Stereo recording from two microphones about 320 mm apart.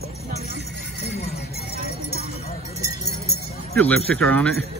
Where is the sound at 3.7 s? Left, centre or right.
Centre.